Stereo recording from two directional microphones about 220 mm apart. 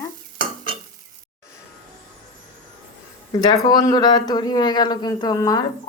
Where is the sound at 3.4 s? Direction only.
15° left (ahead or behind).